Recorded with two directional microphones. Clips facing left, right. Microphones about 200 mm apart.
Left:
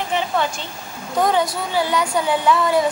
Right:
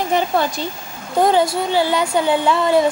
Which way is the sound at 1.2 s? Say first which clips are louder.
Right 4 dB; 25° right (ahead or behind).